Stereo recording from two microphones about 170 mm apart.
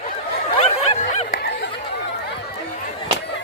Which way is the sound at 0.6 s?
40° left (ahead or behind).